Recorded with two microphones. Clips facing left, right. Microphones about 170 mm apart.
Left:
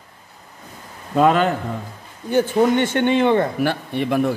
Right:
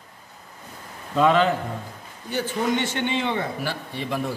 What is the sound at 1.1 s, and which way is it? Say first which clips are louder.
A man's voice: left 3 dB; 50° left (ahead or behind).